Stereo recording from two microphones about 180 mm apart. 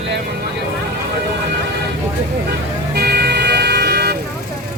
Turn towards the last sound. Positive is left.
turn(degrees=-60)  # may be behind; listen again after turning